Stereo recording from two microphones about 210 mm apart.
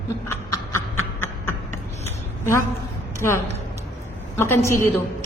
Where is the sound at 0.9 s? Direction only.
80° left.